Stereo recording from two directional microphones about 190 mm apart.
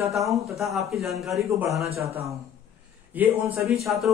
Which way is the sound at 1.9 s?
30° right (ahead or behind).